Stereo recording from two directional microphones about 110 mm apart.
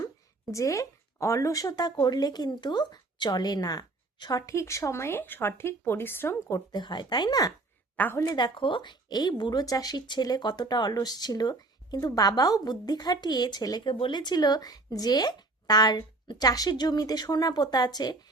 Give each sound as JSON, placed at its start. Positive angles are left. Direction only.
{"t": 0.5, "sound": "speech", "side_deg": 30}
{"t": 6.7, "sound": "speech", "side_deg": 40}
{"t": 7.9, "sound": "speech", "side_deg": 15}
{"t": 8.2, "sound": "speech", "side_deg": 40}